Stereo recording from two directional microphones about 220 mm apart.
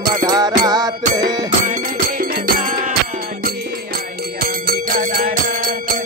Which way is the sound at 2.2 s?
40° right (ahead or behind).